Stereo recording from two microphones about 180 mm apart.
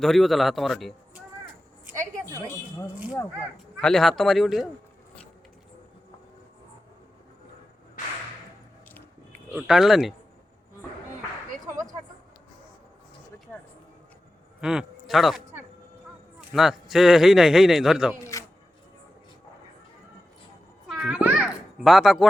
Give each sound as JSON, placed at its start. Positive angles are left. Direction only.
{"t": 0.0, "sound": "a man's voice", "side_deg": 0}
{"t": 2.5, "sound": "speech", "side_deg": 15}
{"t": 3.8, "sound": "a man's voice", "side_deg": 5}
{"t": 9.5, "sound": "a man's voice", "side_deg": 0}
{"t": 14.6, "sound": "a man's voice", "side_deg": -5}
{"t": 16.4, "sound": "a man's voice", "side_deg": -5}
{"t": 18.2, "sound": "a sound", "side_deg": 15}
{"t": 20.8, "sound": "children playing", "side_deg": -5}
{"t": 21.8, "sound": "a man's voice", "side_deg": 0}